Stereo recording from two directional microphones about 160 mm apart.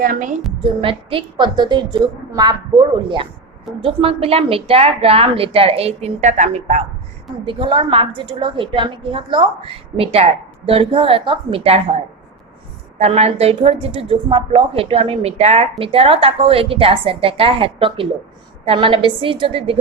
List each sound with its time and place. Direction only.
0.0 s a woman's voice: 55° right (ahead or behind)
0.6 s a woman's voice: 35° right (ahead or behind); by 6.8 s 50° right (ahead or behind)
7.4 s a woman's voice: 30° right (ahead or behind)
13.0 s a woman's voice: 40° right (ahead or behind)